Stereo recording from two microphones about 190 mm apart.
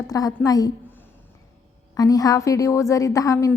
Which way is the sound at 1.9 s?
20° left (ahead or behind).